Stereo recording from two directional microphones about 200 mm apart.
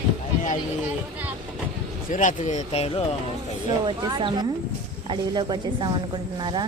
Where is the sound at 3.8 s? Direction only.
20° right (ahead or behind).